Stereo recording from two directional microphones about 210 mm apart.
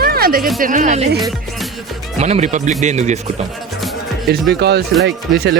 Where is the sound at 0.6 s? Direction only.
40° right (ahead or behind).